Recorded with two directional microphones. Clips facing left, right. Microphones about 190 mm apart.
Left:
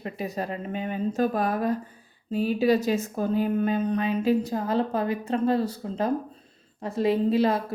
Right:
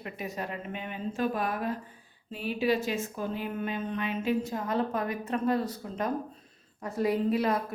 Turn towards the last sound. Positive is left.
turn(degrees=30)  # may be behind; listen again after turning